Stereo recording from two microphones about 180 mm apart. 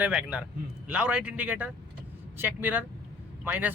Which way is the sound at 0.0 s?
5° right (ahead or behind).